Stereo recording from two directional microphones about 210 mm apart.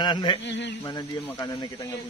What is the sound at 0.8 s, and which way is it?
Speech, 15° left (ahead or behind).